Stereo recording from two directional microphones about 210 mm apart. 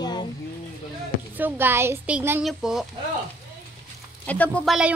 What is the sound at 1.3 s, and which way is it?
Speech, 10° right (ahead or behind).